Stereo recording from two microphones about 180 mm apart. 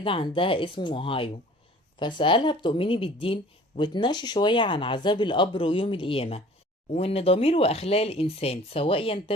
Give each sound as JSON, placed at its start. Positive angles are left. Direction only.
{"t": 0.0, "sound": "speech", "side_deg": 30}